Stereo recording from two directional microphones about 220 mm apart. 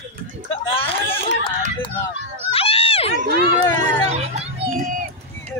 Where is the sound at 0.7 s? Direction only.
25° left (ahead or behind).